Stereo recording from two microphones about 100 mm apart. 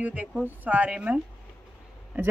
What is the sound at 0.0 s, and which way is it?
Speech, 15° right (ahead or behind).